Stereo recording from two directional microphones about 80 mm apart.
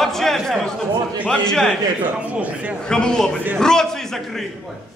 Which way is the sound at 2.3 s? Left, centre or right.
Centre.